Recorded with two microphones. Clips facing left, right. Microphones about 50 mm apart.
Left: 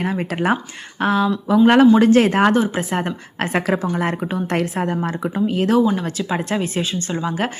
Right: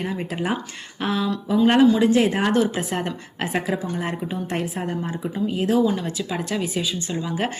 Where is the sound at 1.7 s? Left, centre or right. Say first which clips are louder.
Left 4 dB; left.